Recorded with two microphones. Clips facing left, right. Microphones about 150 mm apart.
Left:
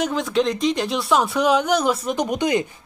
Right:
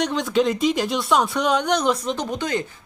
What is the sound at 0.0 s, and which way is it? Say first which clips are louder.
Speech: even; centre (ahead or behind).